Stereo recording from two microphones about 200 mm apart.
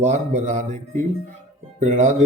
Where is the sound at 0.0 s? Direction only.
35° right (ahead or behind).